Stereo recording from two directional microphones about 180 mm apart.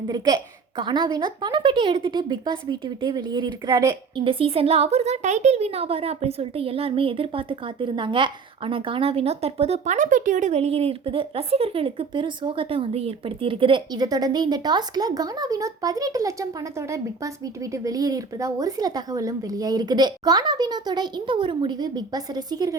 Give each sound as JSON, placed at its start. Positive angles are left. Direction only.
{"t": 0.8, "sound": "a woman's voice", "side_deg": -25}